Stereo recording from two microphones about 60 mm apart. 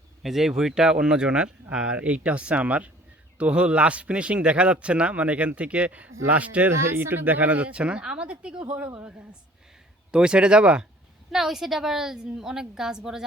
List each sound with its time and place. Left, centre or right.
0.2 s a woman's voice: centre; by 6.7 s right
6.7 s a man's voice: right; by 10.8 s centre
11.3 s a woman's voice: centre